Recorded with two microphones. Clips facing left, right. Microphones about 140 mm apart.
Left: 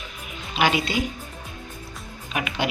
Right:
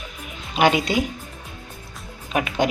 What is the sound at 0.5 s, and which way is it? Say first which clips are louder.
Speech: right 4 dB; 45° right (ahead or behind).